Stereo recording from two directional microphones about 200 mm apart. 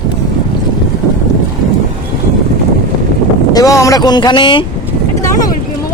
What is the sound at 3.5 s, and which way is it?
Speech, 20° left (ahead or behind).